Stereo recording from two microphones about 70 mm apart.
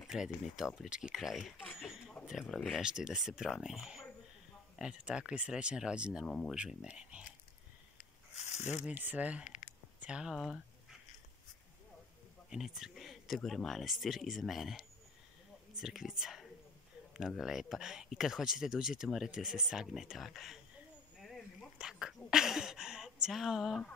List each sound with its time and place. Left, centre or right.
0.0 s speech: centre
1.1 s speech: centre
1.8 s a sound: centre
2.7 s speech: centre
8.8 s speech: right
9.9 s a sound: centre
10.2 s speech: centre
12.4 s a sound: centre
13.4 s speech: centre
21.7 s whispering: centre
23.2 s speech: centre